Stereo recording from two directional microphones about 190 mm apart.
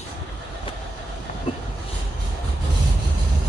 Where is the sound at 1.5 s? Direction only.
25° left (ahead or behind).